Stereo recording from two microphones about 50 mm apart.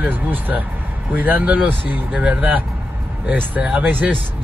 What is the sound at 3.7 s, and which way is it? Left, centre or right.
Speech, right.